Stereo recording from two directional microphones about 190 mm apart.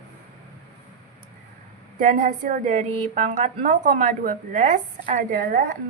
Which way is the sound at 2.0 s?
40° right (ahead or behind).